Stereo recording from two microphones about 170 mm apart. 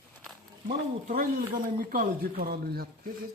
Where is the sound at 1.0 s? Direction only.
55° right (ahead or behind).